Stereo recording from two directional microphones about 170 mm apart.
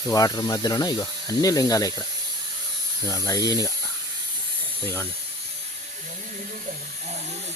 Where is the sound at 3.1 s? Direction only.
20° left (ahead or behind).